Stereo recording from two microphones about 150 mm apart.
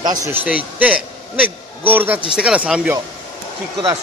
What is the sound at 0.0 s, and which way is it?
Speech, 25° right (ahead or behind).